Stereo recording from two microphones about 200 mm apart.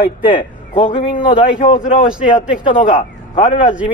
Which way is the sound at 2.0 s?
5° right (ahead or behind).